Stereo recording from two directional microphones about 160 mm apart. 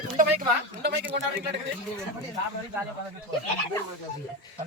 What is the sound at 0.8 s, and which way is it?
Speech, 90° right.